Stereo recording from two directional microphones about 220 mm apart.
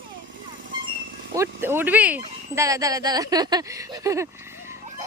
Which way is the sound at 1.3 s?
10° right (ahead or behind).